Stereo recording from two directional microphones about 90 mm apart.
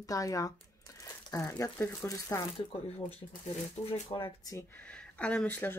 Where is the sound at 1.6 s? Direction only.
30° left (ahead or behind).